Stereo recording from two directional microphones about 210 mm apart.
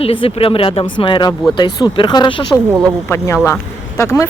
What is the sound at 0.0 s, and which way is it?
Speech, 25° left (ahead or behind).